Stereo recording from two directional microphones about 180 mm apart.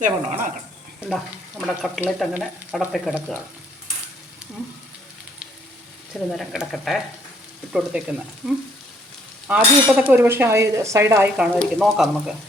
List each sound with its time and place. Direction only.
0.0 s speech: 45° right (ahead or behind)
1.6 s speech: centre (ahead or behind)
6.3 s speech: centre (ahead or behind)
9.5 s cutlery: 10° right (ahead or behind)
11.6 s speech: centre (ahead or behind)